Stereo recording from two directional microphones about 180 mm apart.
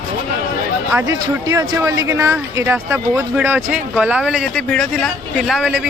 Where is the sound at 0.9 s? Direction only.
15° right (ahead or behind).